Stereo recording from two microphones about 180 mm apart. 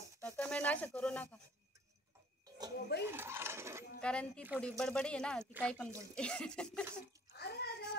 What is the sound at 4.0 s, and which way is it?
Speech, 5° left (ahead or behind).